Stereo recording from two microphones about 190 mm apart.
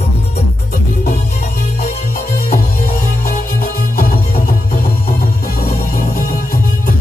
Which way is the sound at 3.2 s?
50° left (ahead or behind).